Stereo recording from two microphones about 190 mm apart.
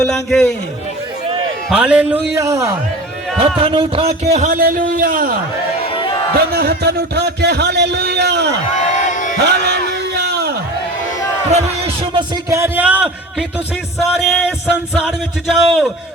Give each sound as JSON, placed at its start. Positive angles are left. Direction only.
{"t": 0.0, "sound": "a man's voice", "side_deg": 0}
{"t": 1.7, "sound": "speech", "side_deg": -5}
{"t": 3.3, "sound": "speech", "side_deg": -30}
{"t": 5.8, "sound": "a sound", "side_deg": 30}
{"t": 6.3, "sound": "a man's voice", "side_deg": -55}
{"t": 8.9, "sound": "a sound", "side_deg": 40}
{"t": 9.4, "sound": "a sound", "side_deg": -60}
{"t": 12.1, "sound": "speech", "side_deg": -15}
{"t": 14.1, "sound": "a man's voice", "side_deg": 0}